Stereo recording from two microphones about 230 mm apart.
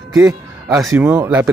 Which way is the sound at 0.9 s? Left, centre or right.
Centre.